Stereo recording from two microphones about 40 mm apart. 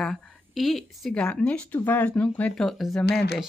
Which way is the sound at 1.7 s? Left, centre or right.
Left.